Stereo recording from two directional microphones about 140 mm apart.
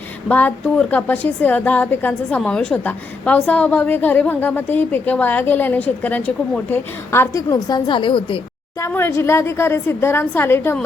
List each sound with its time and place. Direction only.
0.3 s a woman's voice: 10° left (ahead or behind); by 8.4 s 35° left (ahead or behind)
8.9 s a woman's voice: 15° left (ahead or behind)